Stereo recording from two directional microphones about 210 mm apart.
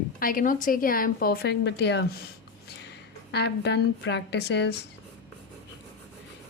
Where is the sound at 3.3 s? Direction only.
55° left (ahead or behind).